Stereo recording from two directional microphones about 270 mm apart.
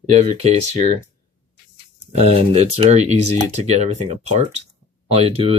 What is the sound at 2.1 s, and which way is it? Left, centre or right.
Speech, right.